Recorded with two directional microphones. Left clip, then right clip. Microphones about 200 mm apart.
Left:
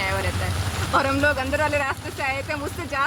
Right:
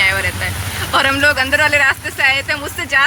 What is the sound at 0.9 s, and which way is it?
Speech, centre (ahead or behind).